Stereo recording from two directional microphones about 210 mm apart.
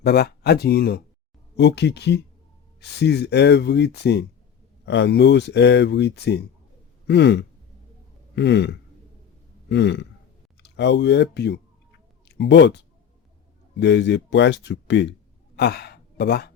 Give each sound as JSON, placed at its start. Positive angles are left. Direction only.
{"t": 0.0, "sound": "speech", "side_deg": 50}